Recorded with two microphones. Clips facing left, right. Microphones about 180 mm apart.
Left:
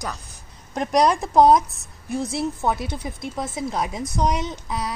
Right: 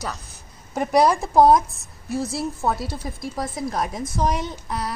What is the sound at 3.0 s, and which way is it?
Speech, 10° left (ahead or behind).